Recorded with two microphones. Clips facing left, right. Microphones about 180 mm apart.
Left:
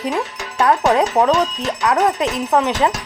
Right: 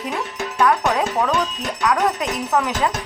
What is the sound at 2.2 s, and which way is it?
Music, 30° left (ahead or behind).